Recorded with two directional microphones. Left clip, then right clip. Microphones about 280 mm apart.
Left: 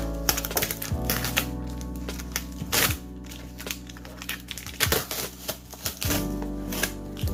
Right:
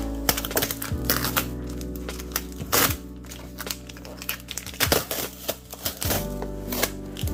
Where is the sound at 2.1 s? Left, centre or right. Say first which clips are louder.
Even; centre.